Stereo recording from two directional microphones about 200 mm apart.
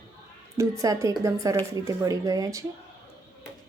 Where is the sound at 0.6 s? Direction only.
15° right (ahead or behind).